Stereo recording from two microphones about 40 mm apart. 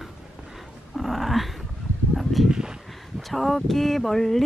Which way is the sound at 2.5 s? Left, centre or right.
Right.